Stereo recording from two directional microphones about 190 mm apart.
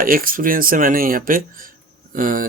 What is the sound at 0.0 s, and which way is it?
Speech, 50° right (ahead or behind).